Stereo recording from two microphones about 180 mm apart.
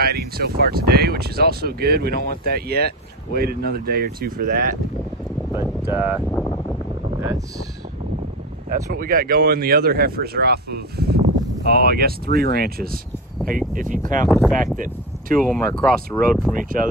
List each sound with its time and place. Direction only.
0.0 s speech: 60° right (ahead or behind)
5.5 s speech: 15° right (ahead or behind)
8.6 s speech: 50° right (ahead or behind)
14.3 s speech: centre (ahead or behind)
14.8 s speech: 50° right (ahead or behind)
15.4 s speech: 5° left (ahead or behind)
16.5 s speech: 50° right (ahead or behind)